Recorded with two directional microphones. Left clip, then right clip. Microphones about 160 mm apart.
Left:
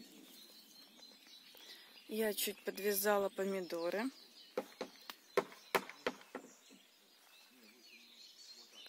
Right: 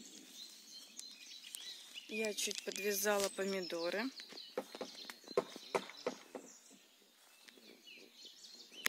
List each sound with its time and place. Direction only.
2.0 s speech: 15° left (ahead or behind)
4.6 s a sound: 30° left (ahead or behind)
5.3 s horse: 40° left (ahead or behind)